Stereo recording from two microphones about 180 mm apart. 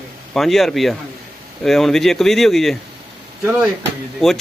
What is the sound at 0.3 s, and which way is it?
A man's voice, centre (ahead or behind).